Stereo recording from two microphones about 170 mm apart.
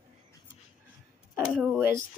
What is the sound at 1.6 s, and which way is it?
Speech, 10° right (ahead or behind).